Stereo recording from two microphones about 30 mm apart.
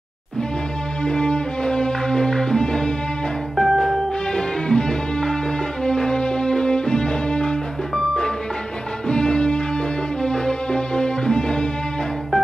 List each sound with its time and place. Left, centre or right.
1.0 s music: left
3.5 s music: centre
4.3 s music: left
7.9 s music: left